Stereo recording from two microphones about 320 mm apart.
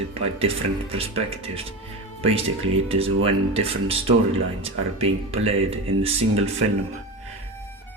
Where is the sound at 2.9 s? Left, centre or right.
Centre.